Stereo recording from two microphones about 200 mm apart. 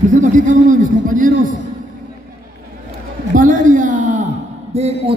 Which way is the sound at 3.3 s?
40° right (ahead or behind).